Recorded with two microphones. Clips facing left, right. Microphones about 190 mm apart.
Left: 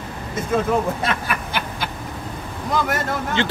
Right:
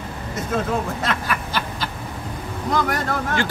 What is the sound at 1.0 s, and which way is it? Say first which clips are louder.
Snicker: even; 10° left (ahead or behind).